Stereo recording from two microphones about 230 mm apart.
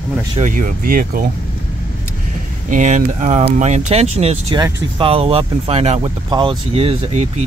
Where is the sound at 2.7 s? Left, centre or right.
Right.